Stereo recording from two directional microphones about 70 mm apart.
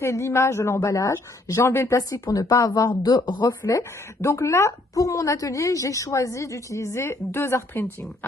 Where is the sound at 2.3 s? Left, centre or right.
Left.